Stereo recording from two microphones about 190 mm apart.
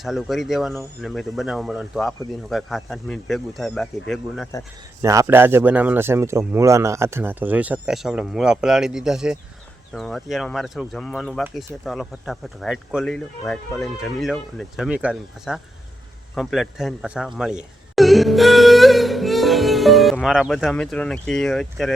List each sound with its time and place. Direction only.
0.0 s speech: centre (ahead or behind)
4.5 s speech: 15° left (ahead or behind)
5.0 s a man's voice: 15° right (ahead or behind); by 21.9 s centre (ahead or behind)